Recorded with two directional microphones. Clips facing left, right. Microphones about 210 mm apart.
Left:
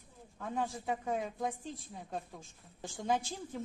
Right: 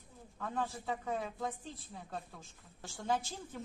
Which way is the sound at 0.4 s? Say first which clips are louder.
Left 2 dB; 15° left (ahead or behind).